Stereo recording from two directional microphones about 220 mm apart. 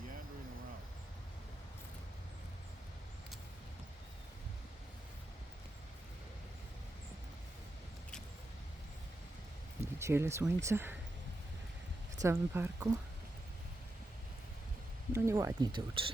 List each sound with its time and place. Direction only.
9.8 s speech: 10° right (ahead or behind)
12.2 s speech: 10° right (ahead or behind)
15.1 s speech: 10° right (ahead or behind)